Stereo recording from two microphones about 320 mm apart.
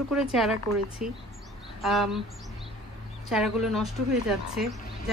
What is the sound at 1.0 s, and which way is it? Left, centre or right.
Speech, right.